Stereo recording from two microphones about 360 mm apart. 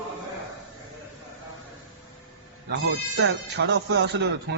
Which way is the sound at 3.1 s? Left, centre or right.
Right.